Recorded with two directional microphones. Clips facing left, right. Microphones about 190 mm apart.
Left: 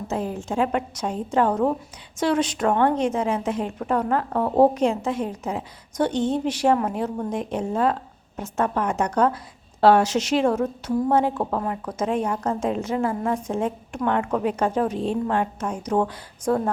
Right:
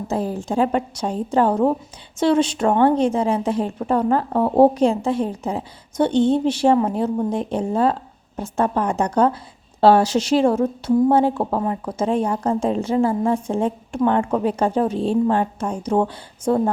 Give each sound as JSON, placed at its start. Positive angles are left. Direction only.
{"t": 0.1, "sound": "a woman's voice", "side_deg": -35}